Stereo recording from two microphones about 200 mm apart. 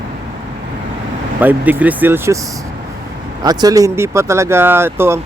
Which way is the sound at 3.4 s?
20° right (ahead or behind).